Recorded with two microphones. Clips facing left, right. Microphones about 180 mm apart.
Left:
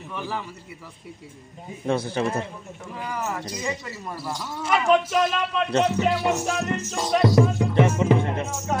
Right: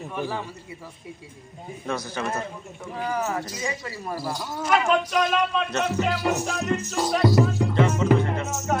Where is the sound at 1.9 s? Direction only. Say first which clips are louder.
Left 5 dB; 25° left (ahead or behind).